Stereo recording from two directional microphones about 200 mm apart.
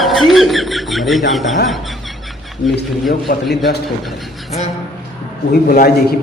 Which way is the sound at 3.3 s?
45° left (ahead or behind).